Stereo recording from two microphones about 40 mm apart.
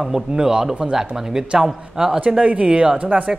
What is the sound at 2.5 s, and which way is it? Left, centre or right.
Speech, right.